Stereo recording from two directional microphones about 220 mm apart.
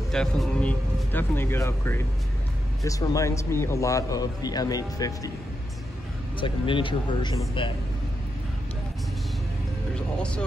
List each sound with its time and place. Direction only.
0.1 s a man's voice: 5° left (ahead or behind)
6.4 s speech: 20° left (ahead or behind)
9.9 s speech: 5° left (ahead or behind)